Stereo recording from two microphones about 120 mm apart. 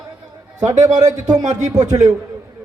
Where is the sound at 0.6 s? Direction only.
30° right (ahead or behind).